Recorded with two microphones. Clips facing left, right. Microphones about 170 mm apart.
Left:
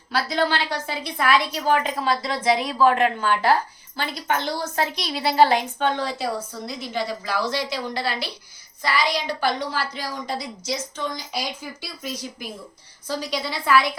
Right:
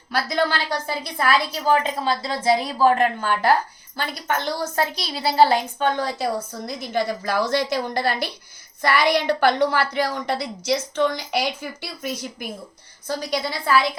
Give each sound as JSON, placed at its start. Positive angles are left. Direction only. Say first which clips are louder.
{"t": 0.1, "sound": "a woman's voice", "louder": "even", "side_deg": -45}